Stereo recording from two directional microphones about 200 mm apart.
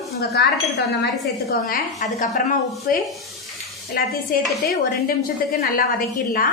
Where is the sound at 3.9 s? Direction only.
50° left (ahead or behind).